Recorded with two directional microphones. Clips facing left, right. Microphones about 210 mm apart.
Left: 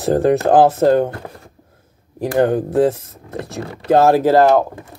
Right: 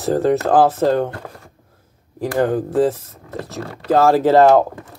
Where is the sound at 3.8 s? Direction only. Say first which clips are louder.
Left 2 dB; 20° left (ahead or behind).